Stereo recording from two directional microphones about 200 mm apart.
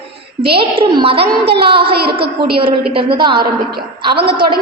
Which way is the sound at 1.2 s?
55° right (ahead or behind).